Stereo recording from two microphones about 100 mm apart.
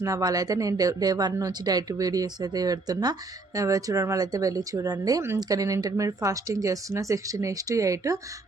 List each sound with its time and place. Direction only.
0.0 s speech: 35° right (ahead or behind)